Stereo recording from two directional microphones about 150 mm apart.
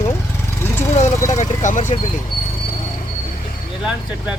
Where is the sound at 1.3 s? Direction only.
55° left (ahead or behind).